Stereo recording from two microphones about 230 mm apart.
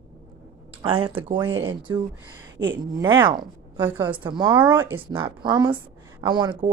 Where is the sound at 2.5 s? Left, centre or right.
Right.